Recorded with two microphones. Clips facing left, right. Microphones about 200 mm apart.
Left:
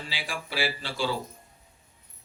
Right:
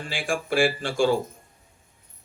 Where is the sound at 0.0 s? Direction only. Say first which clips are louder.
Right 8 dB; 50° right (ahead or behind).